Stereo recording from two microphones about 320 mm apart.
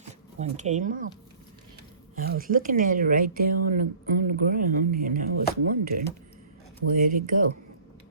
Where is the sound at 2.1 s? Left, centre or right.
Right.